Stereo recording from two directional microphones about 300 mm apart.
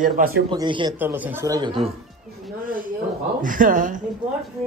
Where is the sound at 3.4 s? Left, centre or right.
Right.